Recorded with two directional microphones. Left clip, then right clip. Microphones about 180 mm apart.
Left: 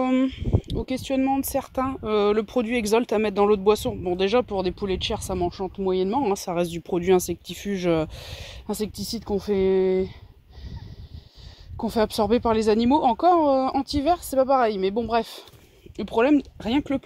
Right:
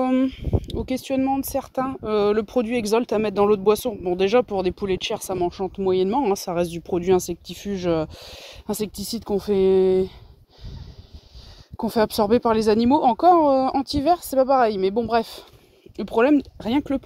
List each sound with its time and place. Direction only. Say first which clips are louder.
0.0 s speech: right 1 dB; 20° right (ahead or behind)
1.2 s speech: right 1 dB; 10° right (ahead or behind); by 6.4 s 30° right (ahead or behind)
6.4 s speech: right 2 dB; 15° right (ahead or behind)
8.6 s speech: right 2 dB; 30° right (ahead or behind)
11.7 s speech: right 2 dB; 30° right (ahead or behind)